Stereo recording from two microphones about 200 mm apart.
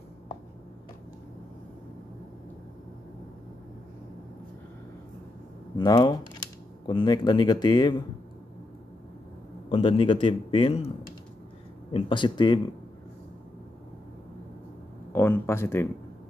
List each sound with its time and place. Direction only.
5.8 s a man's voice: 15° left (ahead or behind)
9.7 s a man's voice: 25° left (ahead or behind)
11.9 s a man's voice: 25° left (ahead or behind)
15.1 s speech: 10° left (ahead or behind)